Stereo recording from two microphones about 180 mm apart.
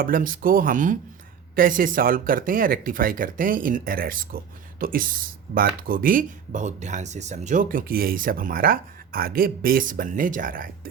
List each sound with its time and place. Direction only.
0.0 s speech: 50° right (ahead or behind)